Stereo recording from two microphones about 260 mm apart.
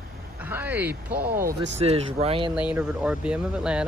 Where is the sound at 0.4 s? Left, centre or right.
Centre.